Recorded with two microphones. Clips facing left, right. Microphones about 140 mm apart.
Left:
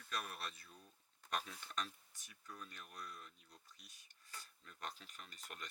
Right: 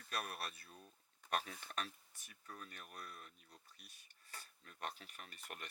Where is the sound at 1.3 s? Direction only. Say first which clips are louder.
Right 3 dB; 60° right (ahead or behind).